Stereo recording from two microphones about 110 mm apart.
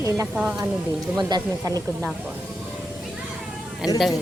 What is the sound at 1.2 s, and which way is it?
Speech, 40° right (ahead or behind).